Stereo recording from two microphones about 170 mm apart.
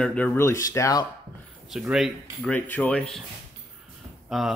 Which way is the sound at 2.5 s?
10° left (ahead or behind).